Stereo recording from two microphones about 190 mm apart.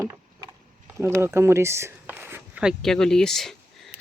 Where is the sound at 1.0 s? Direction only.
15° right (ahead or behind).